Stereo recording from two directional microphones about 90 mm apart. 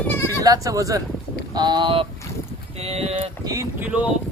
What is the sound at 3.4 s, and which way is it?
Speech, 40° right (ahead or behind).